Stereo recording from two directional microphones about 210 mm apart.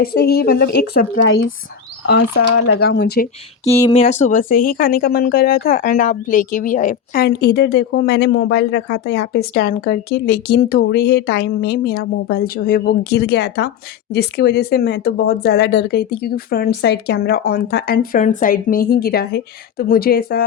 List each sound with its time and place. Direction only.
0.0 s a woman's voice: 50° left (ahead or behind)
3.6 s speech: 15° left (ahead or behind)
3.9 s a woman's voice: 30° left (ahead or behind); by 20.4 s 45° left (ahead or behind)